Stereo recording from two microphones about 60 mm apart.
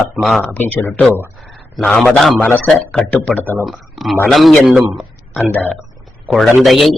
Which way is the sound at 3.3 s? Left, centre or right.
Left.